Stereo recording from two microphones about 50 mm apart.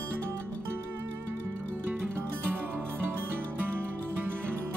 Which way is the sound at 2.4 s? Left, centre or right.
Right.